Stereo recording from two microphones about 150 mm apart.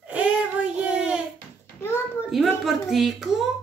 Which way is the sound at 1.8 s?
15° left (ahead or behind).